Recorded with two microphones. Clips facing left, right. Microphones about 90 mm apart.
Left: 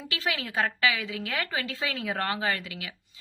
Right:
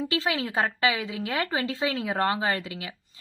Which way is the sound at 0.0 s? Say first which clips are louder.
Right 5 dB; 30° right (ahead or behind).